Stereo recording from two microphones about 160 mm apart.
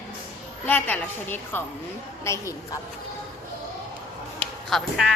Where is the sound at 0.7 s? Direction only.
10° left (ahead or behind).